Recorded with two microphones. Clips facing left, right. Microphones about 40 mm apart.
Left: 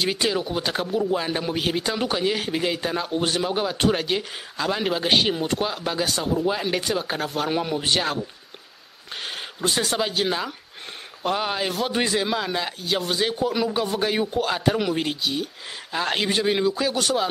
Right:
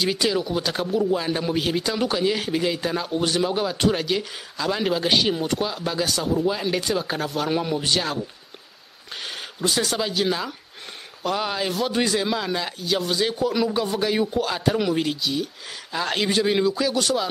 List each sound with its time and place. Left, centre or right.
0.2 s speech: left
7.8 s speech: centre
9.1 s speech: centre